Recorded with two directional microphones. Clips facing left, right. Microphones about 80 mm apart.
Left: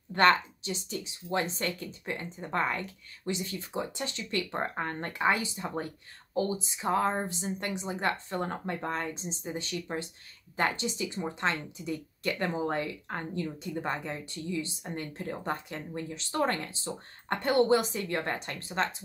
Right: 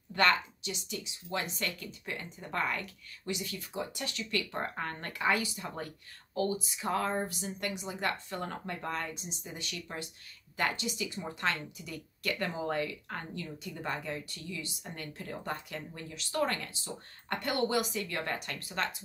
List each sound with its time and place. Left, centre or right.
0.1 s a woman's voice: left